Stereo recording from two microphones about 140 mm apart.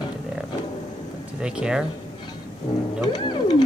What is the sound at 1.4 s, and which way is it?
Speech, 5° right (ahead or behind).